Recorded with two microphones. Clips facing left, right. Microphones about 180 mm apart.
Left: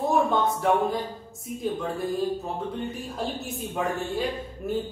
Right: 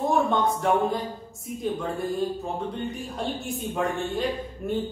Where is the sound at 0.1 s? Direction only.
Centre (ahead or behind).